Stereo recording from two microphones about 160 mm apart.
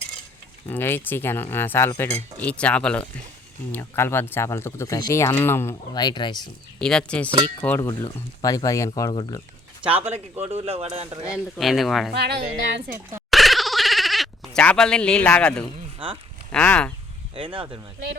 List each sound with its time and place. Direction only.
0.7 s speech: 15° left (ahead or behind)
2.4 s speech: 10° left (ahead or behind); by 6.5 s 25° left (ahead or behind)
6.7 s speech: 5° left (ahead or behind)
8.0 s speech: 20° left (ahead or behind)
9.8 s speech: 10° right (ahead or behind)
10.4 s speech: 40° right (ahead or behind)
11.2 s speech: 5° right (ahead or behind)
12.1 s a woman's voice: 90° right
13.3 s a sound: centre (ahead or behind)
16.5 s speech: 5° left (ahead or behind)
17.3 s speech: 35° right (ahead or behind)